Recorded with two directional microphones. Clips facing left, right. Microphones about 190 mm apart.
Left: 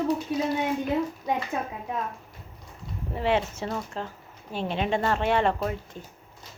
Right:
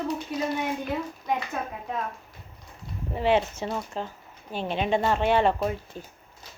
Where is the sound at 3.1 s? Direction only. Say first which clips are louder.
Right 2 dB; 25° right (ahead or behind).